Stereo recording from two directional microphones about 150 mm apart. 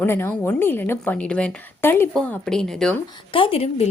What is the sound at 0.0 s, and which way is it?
A woman's voice, 15° left (ahead or behind).